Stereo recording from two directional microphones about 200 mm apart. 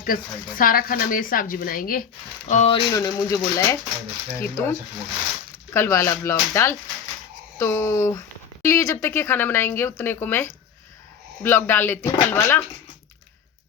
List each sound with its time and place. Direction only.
0.0 s speech: 45° left (ahead or behind)
2.5 s speech: 30° left (ahead or behind)
2.9 s speech: 15° left (ahead or behind)
5.7 s speech: 15° left (ahead or behind)